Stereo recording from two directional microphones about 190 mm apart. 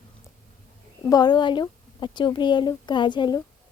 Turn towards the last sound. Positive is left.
turn(degrees=25)  # may be behind; listen again after turning